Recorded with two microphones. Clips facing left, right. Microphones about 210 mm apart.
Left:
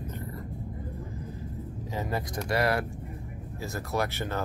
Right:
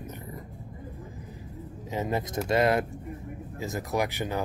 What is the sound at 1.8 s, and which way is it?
Speech, 20° right (ahead or behind).